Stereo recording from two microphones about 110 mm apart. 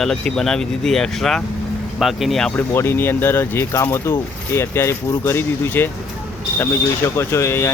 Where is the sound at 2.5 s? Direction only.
20° left (ahead or behind).